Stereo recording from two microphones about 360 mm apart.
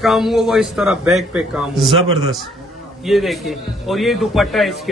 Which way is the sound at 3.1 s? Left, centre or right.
Centre.